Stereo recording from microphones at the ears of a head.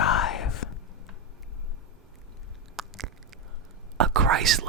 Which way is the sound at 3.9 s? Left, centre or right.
Right.